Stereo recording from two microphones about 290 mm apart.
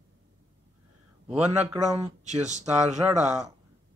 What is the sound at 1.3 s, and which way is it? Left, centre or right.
Speech, centre.